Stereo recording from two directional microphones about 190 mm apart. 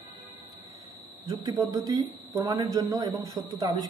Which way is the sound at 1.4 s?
20° right (ahead or behind).